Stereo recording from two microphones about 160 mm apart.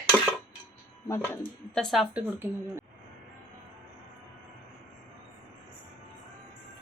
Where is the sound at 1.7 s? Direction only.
Centre (ahead or behind).